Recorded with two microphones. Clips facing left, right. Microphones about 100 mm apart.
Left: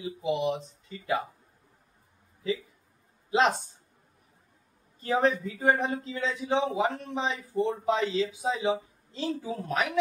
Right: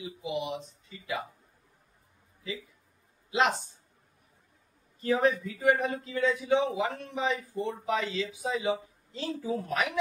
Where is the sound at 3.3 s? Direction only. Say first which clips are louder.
Left 3 dB; 35° left (ahead or behind).